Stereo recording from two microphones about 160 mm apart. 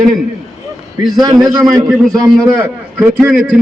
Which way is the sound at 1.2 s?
20° right (ahead or behind).